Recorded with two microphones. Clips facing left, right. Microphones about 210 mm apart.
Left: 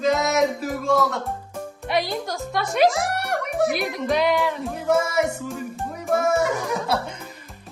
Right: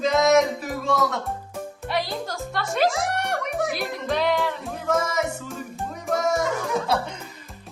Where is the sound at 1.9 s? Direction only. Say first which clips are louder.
Left 3 dB; 15° left (ahead or behind).